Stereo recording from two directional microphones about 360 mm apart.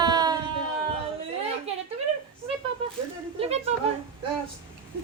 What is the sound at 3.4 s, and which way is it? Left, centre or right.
Speech, centre.